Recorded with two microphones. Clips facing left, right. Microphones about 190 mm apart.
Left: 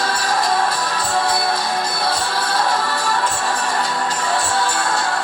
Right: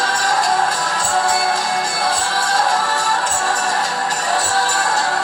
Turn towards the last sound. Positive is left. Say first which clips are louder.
# right 1 dB
turn(degrees=-40)  # may be behind; listen again after turning